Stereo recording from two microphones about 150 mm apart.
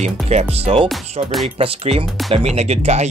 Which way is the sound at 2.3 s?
45° right (ahead or behind).